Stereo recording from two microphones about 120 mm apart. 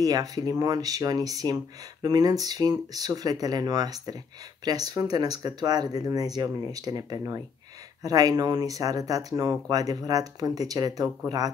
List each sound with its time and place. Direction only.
0.0 s speech: 30° right (ahead or behind)